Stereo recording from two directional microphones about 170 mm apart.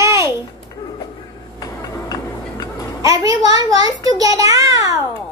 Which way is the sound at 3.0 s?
20° right (ahead or behind).